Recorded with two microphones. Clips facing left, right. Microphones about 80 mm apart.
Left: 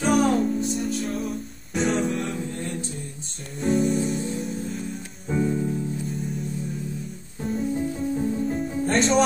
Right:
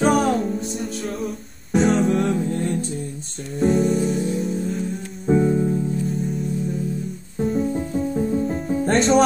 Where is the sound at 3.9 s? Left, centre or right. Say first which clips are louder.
Right 4 dB; right.